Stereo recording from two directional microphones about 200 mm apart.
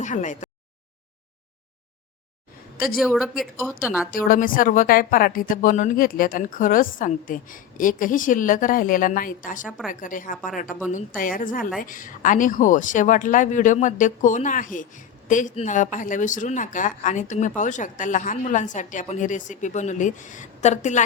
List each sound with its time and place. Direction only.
0.0 s speech: 35° left (ahead or behind)
3.0 s speech: centre (ahead or behind)
4.1 s a woman's voice: 45° left (ahead or behind)
9.6 s speech: centre (ahead or behind)
9.9 s a woman's voice: 40° left (ahead or behind)